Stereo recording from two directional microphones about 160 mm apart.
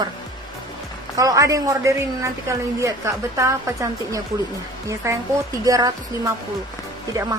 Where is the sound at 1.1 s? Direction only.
20° right (ahead or behind).